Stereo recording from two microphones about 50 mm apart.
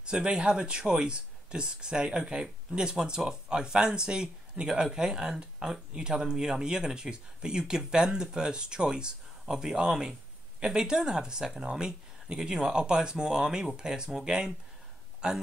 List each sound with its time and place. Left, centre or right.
0.0 s speech: centre